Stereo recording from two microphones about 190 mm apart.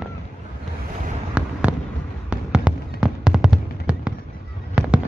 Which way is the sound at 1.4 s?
5° right (ahead or behind).